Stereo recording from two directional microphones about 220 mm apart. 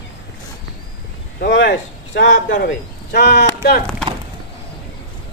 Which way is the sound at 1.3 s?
50° left (ahead or behind).